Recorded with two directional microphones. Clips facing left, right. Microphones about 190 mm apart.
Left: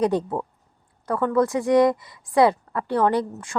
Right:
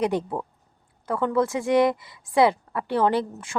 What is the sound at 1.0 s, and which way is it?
A woman's voice, 20° right (ahead or behind).